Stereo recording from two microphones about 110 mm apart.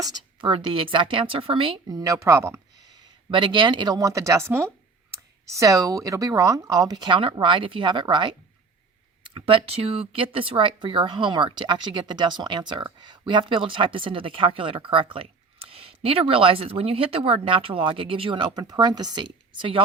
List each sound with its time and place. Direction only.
0.3 s speech: 50° right (ahead or behind)
1.9 s a woman's voice: 35° right (ahead or behind)
3.2 s speech: 50° right (ahead or behind)